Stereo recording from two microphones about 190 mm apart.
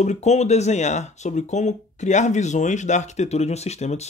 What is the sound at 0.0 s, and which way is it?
Speech, 35° left (ahead or behind).